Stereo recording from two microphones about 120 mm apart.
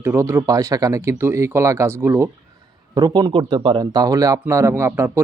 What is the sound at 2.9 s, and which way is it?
Speech, 30° right (ahead or behind).